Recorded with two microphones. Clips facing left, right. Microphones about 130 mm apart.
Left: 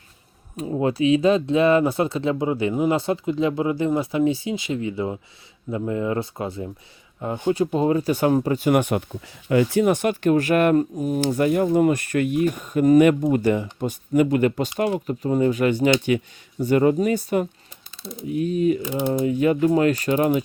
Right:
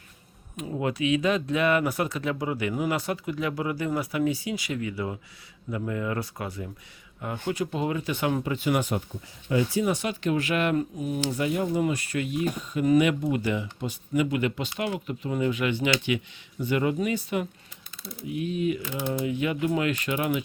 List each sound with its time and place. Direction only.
0.5 s speech: 30° left (ahead or behind)
18.8 s speech: 15° left (ahead or behind)
19.2 s speech: 40° left (ahead or behind)